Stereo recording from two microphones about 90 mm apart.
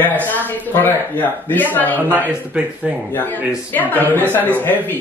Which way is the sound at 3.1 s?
20° left (ahead or behind).